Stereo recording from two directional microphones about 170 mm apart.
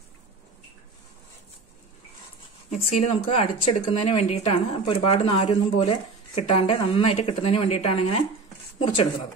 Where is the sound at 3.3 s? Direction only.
40° left (ahead or behind).